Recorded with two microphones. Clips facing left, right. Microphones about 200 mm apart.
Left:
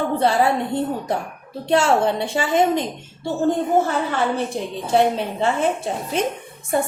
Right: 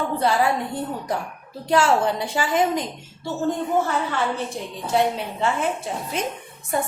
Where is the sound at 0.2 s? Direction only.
25° left (ahead or behind).